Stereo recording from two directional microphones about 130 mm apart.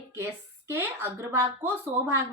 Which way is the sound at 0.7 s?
15° right (ahead or behind).